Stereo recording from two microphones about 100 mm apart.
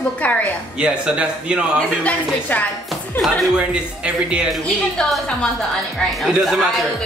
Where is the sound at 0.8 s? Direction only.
10° right (ahead or behind).